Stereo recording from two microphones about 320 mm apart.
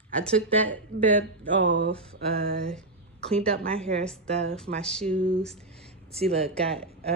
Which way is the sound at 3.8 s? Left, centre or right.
Centre.